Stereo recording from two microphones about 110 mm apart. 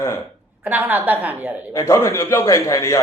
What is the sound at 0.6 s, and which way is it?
Speech, 15° right (ahead or behind).